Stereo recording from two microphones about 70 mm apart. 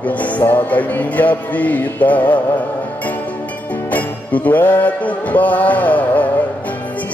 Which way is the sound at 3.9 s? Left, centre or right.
Left.